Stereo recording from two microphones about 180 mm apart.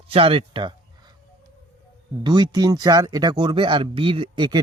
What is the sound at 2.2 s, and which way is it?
Speech, 20° right (ahead or behind).